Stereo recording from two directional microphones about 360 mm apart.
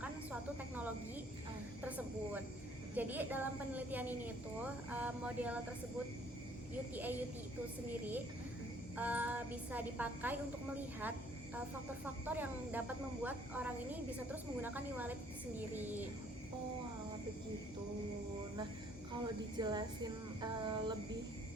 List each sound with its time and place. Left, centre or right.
1.8 s a sound: centre
2.9 s speech: centre
6.9 s speech: centre
9.0 s speech: centre
12.0 s speech: centre
19.5 s a sound: centre